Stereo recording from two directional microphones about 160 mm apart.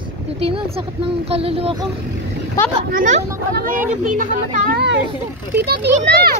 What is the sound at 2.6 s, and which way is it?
Speech, 20° left (ahead or behind).